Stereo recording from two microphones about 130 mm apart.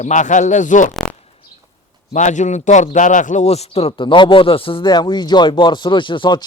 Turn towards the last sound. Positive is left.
turn(degrees=35)  # may be behind; listen again after turning